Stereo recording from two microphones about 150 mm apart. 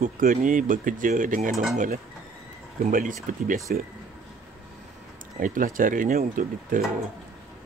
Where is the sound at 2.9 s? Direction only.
65° right (ahead or behind).